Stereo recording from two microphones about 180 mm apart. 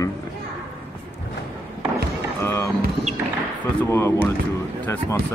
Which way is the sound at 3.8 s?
15° left (ahead or behind).